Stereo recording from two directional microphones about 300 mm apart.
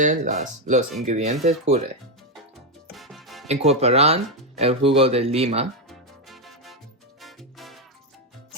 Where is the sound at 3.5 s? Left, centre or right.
Right.